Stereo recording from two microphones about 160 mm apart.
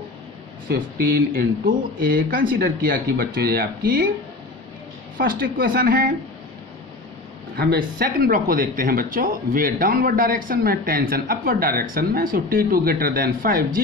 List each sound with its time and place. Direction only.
0.7 s speech: 65° right (ahead or behind)
5.1 s speech: 65° right (ahead or behind)
7.5 s speech: 70° right (ahead or behind)